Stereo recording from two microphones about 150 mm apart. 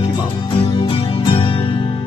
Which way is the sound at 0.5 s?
35° left (ahead or behind).